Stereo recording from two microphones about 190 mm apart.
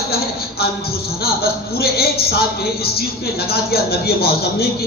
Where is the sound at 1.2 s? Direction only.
55° left (ahead or behind).